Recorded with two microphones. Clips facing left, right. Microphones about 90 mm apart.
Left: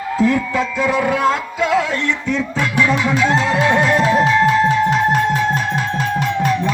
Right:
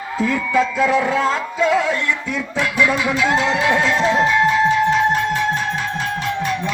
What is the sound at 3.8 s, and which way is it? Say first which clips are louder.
Music: left 2 dB; 5° left (ahead or behind).